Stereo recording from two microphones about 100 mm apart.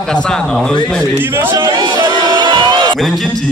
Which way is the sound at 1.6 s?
55° right (ahead or behind).